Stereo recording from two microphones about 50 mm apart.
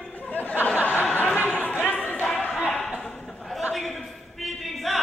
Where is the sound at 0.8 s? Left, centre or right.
Left.